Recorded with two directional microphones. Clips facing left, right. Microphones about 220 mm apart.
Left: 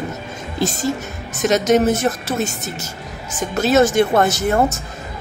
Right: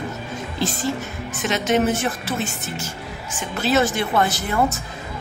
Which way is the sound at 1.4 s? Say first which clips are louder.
Left 5 dB; 40° left (ahead or behind).